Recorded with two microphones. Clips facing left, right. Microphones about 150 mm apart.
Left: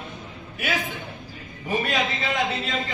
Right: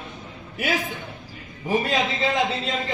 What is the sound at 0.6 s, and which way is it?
A man's voice, 20° right (ahead or behind).